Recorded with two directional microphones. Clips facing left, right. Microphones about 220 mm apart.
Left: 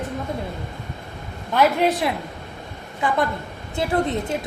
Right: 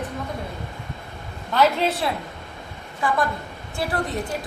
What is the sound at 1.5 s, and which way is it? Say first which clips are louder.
A woman's voice: left 2 dB; 15° left (ahead or behind).